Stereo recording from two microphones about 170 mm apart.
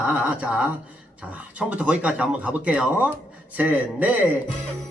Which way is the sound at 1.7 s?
10° right (ahead or behind).